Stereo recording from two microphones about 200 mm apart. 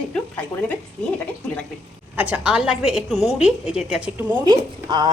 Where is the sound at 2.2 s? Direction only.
5° right (ahead or behind).